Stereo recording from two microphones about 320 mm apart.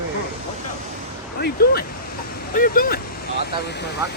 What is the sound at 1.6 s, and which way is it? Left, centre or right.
Speech, left.